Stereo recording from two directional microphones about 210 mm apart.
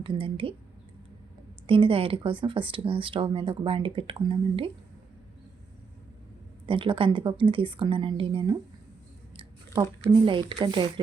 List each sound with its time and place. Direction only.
0.0 s speech: 25° right (ahead or behind)
1.6 s speech: 25° right (ahead or behind)
6.7 s speech: 25° right (ahead or behind)
10.1 s speech: 20° right (ahead or behind)